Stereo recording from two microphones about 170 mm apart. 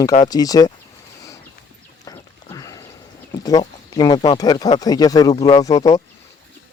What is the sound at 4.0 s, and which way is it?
Speech, 20° left (ahead or behind).